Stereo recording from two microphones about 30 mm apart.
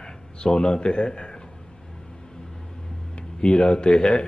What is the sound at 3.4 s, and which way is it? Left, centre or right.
Speech, left.